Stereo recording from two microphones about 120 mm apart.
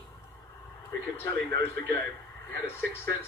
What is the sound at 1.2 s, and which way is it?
Speech, 30° left (ahead or behind).